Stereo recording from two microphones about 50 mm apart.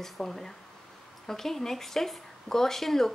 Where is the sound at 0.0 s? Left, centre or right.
Centre.